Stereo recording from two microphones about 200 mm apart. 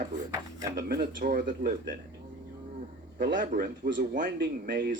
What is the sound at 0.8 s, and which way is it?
Speech, 45° right (ahead or behind).